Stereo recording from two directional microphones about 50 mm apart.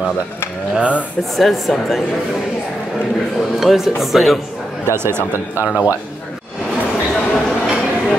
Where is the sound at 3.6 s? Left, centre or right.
Centre.